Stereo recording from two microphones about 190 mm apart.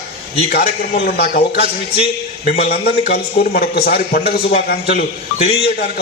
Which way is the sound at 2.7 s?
55° left (ahead or behind).